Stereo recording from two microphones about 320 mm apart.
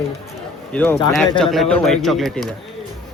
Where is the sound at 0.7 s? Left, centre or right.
Centre.